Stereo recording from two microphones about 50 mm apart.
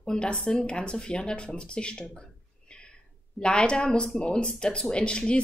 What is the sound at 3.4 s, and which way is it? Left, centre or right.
Speech, centre.